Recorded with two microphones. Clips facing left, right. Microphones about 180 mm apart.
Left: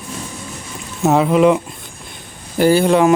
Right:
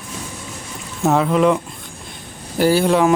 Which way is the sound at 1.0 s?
10° left (ahead or behind).